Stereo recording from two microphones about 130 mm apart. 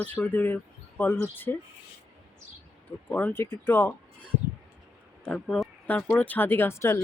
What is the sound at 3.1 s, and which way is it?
Speech, 15° left (ahead or behind).